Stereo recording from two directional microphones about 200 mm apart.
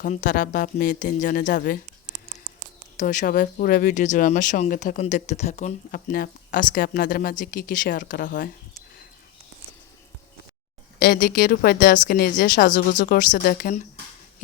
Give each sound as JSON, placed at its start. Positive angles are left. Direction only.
{"t": 0.0, "sound": "speech", "side_deg": 40}
{"t": 3.0, "sound": "speech", "side_deg": 40}
{"t": 11.0, "sound": "speech", "side_deg": 50}